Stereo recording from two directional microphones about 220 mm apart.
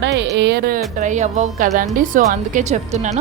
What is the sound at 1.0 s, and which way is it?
A woman's voice, 35° right (ahead or behind).